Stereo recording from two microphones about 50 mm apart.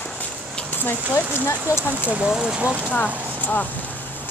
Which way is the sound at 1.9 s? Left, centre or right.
Right.